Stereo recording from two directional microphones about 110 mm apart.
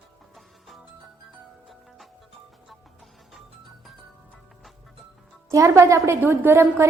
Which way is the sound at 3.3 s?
Centre (ahead or behind).